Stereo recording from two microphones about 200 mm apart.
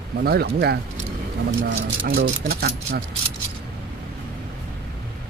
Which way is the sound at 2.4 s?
50° right (ahead or behind).